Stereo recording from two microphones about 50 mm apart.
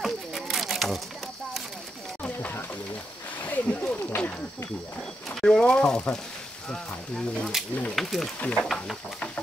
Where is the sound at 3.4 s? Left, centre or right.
Left.